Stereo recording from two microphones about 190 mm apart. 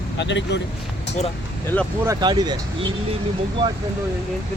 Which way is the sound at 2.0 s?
20° right (ahead or behind).